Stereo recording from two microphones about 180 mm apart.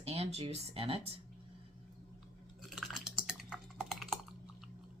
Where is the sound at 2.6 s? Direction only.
5° right (ahead or behind).